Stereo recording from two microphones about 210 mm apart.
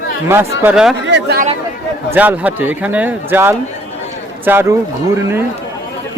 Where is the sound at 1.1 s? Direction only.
50° right (ahead or behind).